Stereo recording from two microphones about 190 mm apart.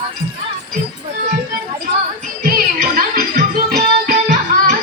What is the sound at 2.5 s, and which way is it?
Music, 50° right (ahead or behind).